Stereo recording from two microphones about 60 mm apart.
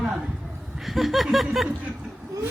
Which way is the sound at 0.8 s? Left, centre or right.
Centre.